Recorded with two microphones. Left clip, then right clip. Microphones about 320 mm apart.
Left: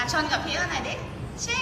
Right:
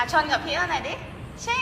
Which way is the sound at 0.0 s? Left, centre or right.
Centre.